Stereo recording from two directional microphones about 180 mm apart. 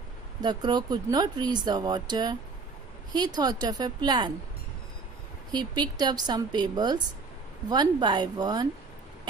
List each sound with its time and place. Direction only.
0.4 s speech: 25° right (ahead or behind)
5.5 s speech: 25° right (ahead or behind)